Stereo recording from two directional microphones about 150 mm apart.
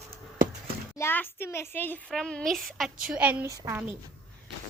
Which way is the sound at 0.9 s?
15° left (ahead or behind).